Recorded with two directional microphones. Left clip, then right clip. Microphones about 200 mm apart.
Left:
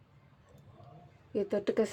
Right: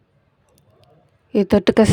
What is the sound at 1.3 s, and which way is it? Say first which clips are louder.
Speech: right 15 dB; 50° right (ahead or behind).